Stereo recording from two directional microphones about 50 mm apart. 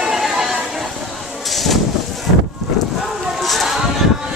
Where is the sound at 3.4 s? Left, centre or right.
Centre.